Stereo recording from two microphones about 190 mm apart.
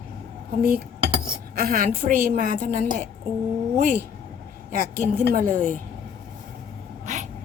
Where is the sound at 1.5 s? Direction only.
50° right (ahead or behind).